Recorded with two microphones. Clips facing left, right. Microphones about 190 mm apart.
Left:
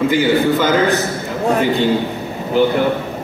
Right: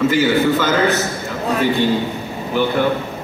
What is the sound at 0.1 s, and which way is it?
Speech, 15° left (ahead or behind).